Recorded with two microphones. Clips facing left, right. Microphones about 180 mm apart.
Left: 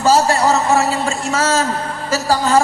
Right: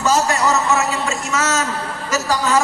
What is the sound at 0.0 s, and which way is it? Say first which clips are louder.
A man's voice: left 4 dB; 30° left (ahead or behind).